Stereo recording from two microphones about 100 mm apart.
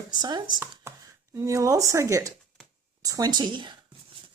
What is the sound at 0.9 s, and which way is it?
Speech, 30° right (ahead or behind).